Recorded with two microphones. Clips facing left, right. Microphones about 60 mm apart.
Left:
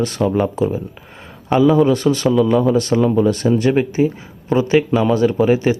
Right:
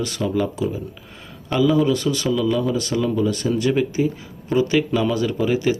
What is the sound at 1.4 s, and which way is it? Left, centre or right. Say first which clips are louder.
Speech: left 5 dB; left.